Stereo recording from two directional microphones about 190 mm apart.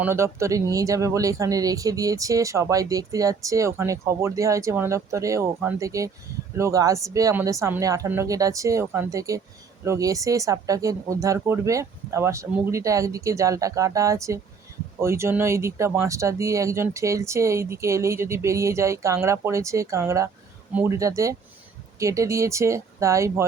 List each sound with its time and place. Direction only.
0.0 s speech: 15° right (ahead or behind)